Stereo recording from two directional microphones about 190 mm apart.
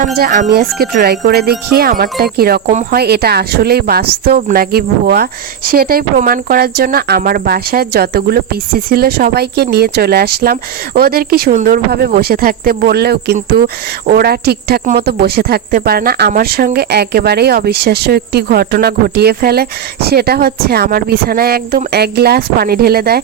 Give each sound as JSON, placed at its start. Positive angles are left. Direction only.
{"t": 0.0, "sound": "a man's voice", "side_deg": -45}